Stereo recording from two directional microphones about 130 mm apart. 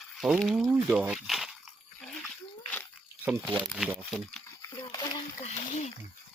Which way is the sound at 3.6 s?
Centre (ahead or behind).